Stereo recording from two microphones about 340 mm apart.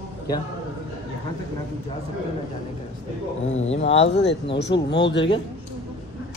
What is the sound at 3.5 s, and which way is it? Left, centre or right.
Speech, centre.